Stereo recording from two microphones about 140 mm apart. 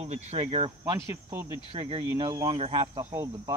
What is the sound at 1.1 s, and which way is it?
Speech, 15° right (ahead or behind).